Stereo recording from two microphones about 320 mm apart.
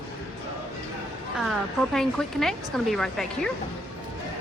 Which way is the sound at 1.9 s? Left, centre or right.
Centre.